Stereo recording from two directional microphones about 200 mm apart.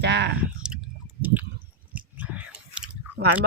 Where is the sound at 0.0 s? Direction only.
55° right (ahead or behind).